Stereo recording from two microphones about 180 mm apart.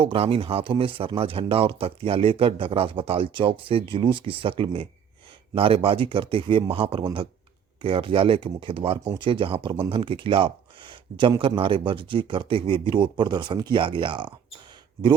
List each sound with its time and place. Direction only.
0.0 s speech: 30° right (ahead or behind)